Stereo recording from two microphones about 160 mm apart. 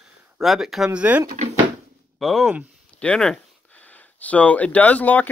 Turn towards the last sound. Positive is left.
turn(degrees=10)  # may be behind; listen again after turning